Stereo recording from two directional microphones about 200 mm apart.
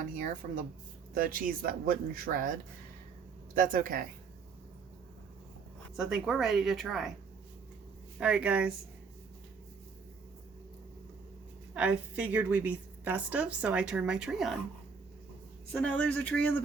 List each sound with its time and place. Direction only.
0.0 s speech: 45° right (ahead or behind)
3.6 s speech: 45° right (ahead or behind)
6.0 s speech: 5° right (ahead or behind)
8.2 s speech: 5° right (ahead or behind)
11.7 s a woman's voice: 5° right (ahead or behind)
15.7 s speech: 5° left (ahead or behind)